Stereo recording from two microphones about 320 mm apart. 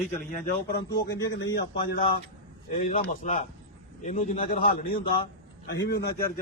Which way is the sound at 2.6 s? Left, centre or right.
Left.